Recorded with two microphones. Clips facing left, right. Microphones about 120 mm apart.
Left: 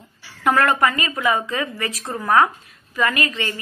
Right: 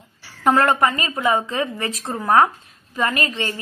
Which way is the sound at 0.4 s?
30° right (ahead or behind).